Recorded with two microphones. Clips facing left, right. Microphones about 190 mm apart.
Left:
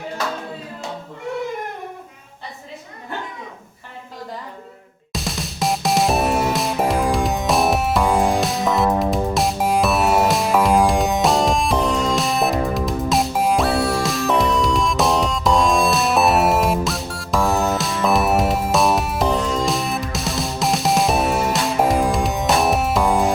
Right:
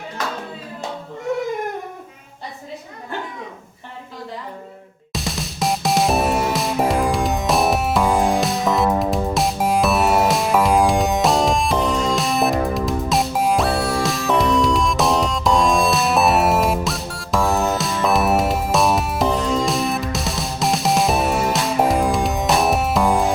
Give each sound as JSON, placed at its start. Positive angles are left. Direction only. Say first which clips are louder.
{"t": 5.1, "sound": "music", "louder": "even", "side_deg": 0}